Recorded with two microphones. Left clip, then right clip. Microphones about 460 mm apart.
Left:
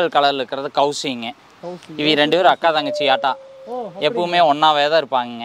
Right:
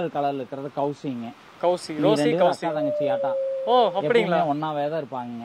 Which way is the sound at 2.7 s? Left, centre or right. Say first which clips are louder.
Left 7 dB; centre.